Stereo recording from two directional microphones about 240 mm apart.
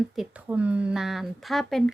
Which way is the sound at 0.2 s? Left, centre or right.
Centre.